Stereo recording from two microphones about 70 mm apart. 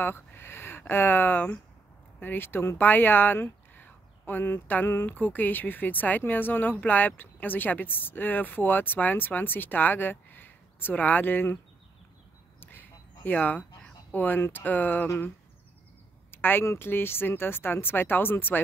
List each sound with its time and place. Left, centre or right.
0.0 s speech: left
12.5 s quack: left
13.2 s speech: left
16.3 s a sound: left
16.6 s speech: left